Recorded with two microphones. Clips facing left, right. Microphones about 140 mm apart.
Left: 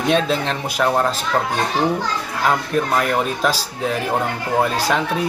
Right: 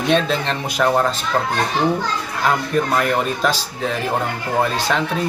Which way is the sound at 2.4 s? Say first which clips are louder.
Even; 5° left (ahead or behind).